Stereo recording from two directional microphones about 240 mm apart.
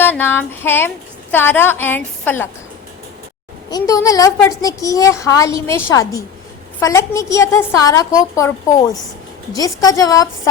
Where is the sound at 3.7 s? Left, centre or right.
Centre.